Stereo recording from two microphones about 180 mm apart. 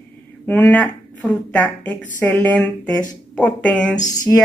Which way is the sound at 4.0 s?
20° left (ahead or behind).